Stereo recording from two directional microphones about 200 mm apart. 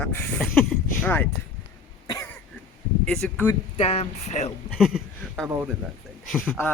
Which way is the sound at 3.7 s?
30° left (ahead or behind).